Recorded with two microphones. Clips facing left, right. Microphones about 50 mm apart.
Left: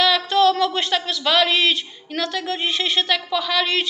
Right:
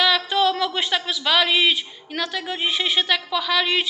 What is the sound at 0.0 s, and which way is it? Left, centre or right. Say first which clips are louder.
Speech: left 3 dB; centre.